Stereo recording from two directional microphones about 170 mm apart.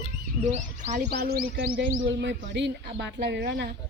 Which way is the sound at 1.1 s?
65° right (ahead or behind).